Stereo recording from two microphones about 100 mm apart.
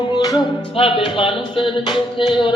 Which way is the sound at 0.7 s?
60° left (ahead or behind).